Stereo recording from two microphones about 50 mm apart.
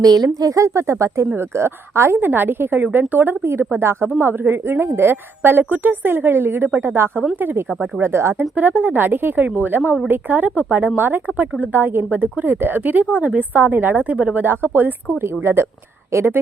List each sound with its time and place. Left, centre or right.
0.5 s speech: right
1.4 s a woman's voice: right
2.1 s speech: right
3.4 s a woman's voice: right
7.7 s speech: right
8.0 s a woman's voice: right
8.5 s a woman's voice: right
14.3 s speech: right
15.2 s a woman's voice: right